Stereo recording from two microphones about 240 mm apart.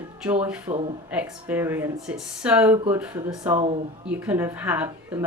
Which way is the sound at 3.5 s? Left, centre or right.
Right.